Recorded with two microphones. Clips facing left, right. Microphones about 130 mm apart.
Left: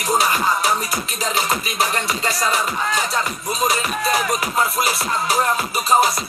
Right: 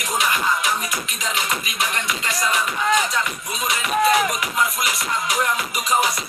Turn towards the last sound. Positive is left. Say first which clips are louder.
# left 3 dB
turn(degrees=35)  # may be behind; listen again after turning